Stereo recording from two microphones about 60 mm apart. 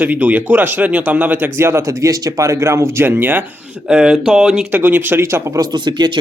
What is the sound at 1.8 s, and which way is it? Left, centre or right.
Speech, right.